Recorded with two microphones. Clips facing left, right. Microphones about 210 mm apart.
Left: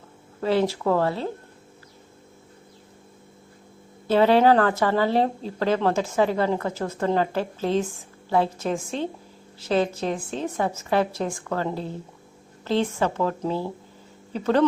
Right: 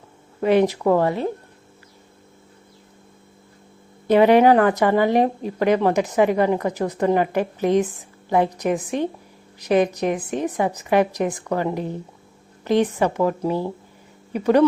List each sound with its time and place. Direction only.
0.4 s speech: 20° right (ahead or behind)
4.0 s speech: 15° right (ahead or behind)